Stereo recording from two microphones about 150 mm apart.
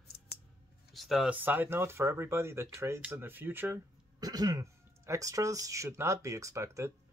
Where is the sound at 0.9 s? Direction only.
Centre (ahead or behind).